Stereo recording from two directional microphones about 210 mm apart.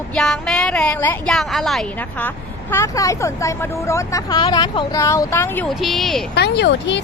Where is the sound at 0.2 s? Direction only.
Centre (ahead or behind).